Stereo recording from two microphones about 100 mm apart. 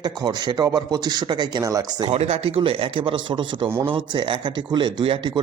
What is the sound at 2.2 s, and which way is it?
Speech, 90° right.